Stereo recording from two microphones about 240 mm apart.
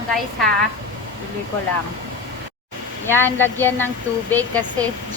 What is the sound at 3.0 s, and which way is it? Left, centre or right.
Speech, centre.